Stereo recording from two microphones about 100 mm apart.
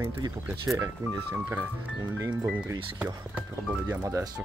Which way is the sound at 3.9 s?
25° right (ahead or behind).